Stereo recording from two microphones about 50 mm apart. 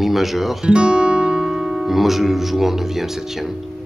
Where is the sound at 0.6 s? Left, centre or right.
Centre.